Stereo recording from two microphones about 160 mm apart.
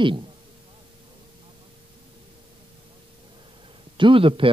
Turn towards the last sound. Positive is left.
turn(degrees=-35)  # may be behind; listen again after turning